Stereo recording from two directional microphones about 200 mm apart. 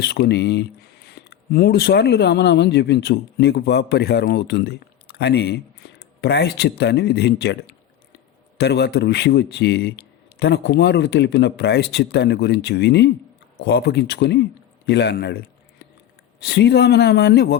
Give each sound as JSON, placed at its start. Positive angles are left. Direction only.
{"t": 0.0, "sound": "a man's voice", "side_deg": 55}
{"t": 16.4, "sound": "a man's voice", "side_deg": 55}